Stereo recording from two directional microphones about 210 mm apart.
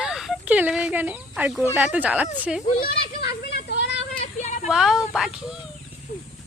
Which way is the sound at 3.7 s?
55° left (ahead or behind).